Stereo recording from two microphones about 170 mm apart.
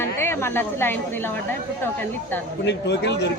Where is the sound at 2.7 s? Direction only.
90° left.